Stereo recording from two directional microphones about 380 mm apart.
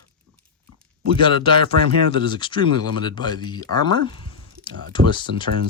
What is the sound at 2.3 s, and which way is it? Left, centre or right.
Speech, centre.